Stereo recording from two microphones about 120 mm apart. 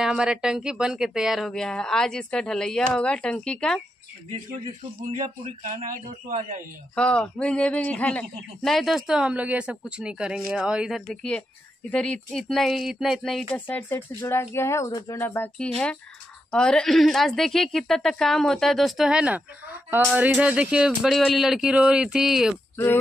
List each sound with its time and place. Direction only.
0.0 s speech: 5° right (ahead or behind)
5.4 s a man's voice: 70° right (ahead or behind)
7.0 s speech: 10° left (ahead or behind)
13.6 s speech: 15° left (ahead or behind)
15.5 s speech: 10° left (ahead or behind)